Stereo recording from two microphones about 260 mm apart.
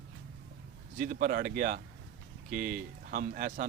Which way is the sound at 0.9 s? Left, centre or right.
Right.